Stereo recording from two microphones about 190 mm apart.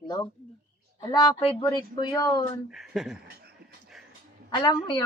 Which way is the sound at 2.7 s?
Centre (ahead or behind).